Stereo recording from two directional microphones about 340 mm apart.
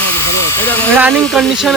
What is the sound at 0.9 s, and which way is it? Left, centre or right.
Speech, centre.